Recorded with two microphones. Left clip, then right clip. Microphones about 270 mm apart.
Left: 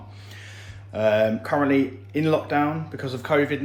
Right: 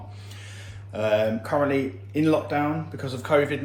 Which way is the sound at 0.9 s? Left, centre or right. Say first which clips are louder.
Left 3 dB; left.